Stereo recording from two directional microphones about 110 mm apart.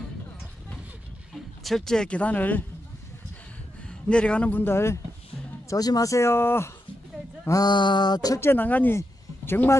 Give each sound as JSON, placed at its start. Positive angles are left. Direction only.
{"t": 1.3, "sound": "speech", "side_deg": 0}
{"t": 3.8, "sound": "a man's voice", "side_deg": 10}
{"t": 5.7, "sound": "speech", "side_deg": 35}
{"t": 7.4, "sound": "a sound", "side_deg": 35}
{"t": 8.4, "sound": "speech", "side_deg": 20}